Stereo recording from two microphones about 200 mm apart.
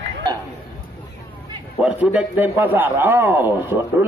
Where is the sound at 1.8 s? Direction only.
10° right (ahead or behind).